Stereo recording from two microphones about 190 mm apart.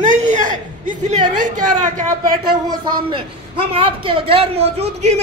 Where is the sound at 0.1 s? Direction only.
40° right (ahead or behind).